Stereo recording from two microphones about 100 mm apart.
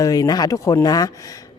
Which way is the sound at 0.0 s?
40° left (ahead or behind).